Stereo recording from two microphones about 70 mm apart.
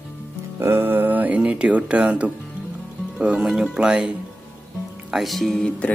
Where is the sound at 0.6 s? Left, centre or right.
Right; by 4.1 s centre.